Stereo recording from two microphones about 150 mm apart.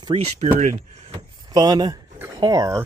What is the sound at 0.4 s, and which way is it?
Speech, 55° right (ahead or behind).